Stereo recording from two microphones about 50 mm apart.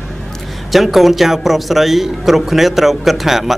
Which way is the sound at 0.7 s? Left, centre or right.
Centre.